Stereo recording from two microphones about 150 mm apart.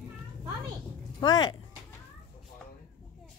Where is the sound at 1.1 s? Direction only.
25° left (ahead or behind).